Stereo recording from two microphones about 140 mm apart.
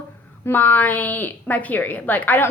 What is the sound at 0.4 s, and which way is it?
A woman's voice, 15° left (ahead or behind).